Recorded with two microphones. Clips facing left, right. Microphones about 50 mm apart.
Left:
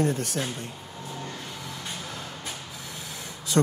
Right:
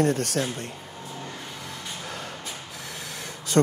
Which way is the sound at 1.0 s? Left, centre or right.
Centre.